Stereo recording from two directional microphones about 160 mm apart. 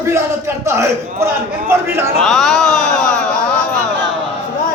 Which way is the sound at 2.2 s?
Centre (ahead or behind).